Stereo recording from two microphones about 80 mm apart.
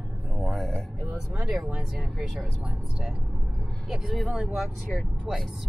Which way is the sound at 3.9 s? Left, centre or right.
Centre.